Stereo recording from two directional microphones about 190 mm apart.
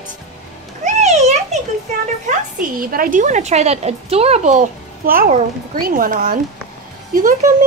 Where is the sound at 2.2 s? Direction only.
50° right (ahead or behind).